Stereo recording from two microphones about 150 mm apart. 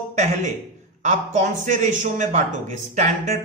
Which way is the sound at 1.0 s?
50° right (ahead or behind).